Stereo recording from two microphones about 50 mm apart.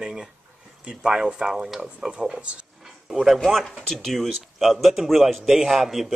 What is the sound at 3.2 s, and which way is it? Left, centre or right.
A man's voice, centre.